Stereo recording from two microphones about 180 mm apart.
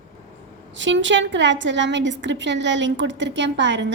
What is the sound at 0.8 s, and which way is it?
A woman's voice, 90° right.